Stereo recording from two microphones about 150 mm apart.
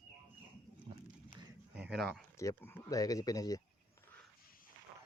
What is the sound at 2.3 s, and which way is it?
Speech, 15° left (ahead or behind).